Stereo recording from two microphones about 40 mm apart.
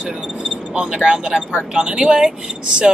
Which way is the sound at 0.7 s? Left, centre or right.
Centre.